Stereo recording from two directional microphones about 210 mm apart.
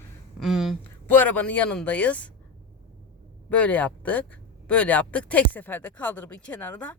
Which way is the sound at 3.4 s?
5° left (ahead or behind).